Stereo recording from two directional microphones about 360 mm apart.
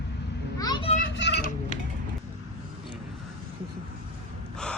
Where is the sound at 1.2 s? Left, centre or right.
Left.